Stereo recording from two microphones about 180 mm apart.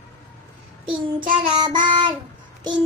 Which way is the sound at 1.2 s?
25° right (ahead or behind).